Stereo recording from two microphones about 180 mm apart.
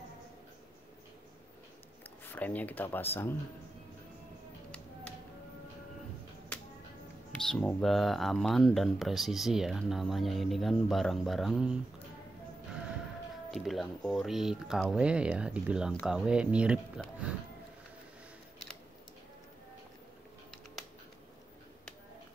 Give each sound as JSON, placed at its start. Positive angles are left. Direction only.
{"t": 2.3, "sound": "speech", "side_deg": 10}
{"t": 7.3, "sound": "speech", "side_deg": 5}
{"t": 13.5, "sound": "speech", "side_deg": 0}